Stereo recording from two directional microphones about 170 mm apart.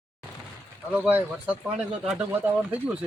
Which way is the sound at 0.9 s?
10° right (ahead or behind).